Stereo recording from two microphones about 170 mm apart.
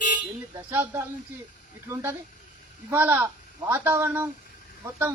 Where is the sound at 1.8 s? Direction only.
15° right (ahead or behind).